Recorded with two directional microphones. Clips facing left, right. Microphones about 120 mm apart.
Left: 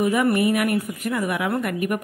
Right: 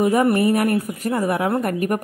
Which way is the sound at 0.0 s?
35° right (ahead or behind).